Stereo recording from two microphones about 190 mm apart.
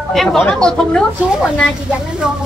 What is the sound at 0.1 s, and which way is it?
Speech, centre (ahead or behind).